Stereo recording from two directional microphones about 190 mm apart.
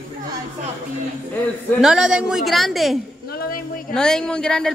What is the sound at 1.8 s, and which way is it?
A woman's voice, 5° right (ahead or behind).